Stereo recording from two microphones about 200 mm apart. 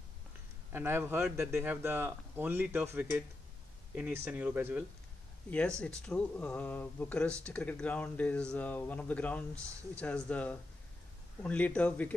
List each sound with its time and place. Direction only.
0.7 s speech: 10° right (ahead or behind)
5.5 s speech: 5° left (ahead or behind)